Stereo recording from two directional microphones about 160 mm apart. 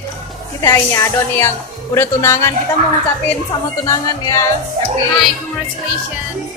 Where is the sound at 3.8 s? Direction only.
20° left (ahead or behind).